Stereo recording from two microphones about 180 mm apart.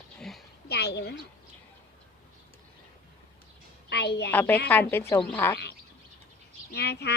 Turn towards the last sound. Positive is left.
turn(degrees=65)  # may be behind; listen again after turning